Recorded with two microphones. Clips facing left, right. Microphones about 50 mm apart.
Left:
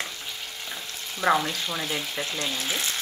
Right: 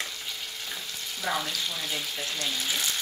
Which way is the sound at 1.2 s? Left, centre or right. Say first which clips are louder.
Left 8 dB; left.